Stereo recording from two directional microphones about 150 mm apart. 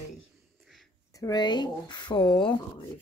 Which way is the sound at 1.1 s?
25° left (ahead or behind).